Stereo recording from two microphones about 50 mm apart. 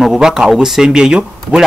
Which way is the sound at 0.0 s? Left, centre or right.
Centre.